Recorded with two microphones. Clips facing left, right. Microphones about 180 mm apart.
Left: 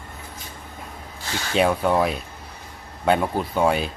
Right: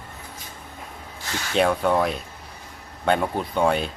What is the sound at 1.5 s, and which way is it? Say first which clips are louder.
A man's voice: left 1 dB; 5° left (ahead or behind).